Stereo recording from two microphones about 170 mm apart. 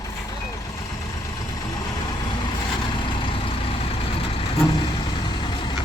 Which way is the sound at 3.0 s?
30° left (ahead or behind).